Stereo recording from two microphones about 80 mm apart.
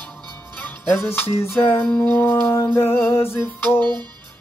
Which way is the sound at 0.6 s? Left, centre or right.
Left.